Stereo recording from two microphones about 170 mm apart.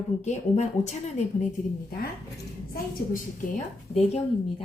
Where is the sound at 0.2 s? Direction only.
40° left (ahead or behind).